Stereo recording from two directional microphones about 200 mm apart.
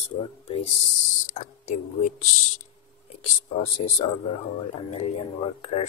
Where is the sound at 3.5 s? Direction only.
30° left (ahead or behind).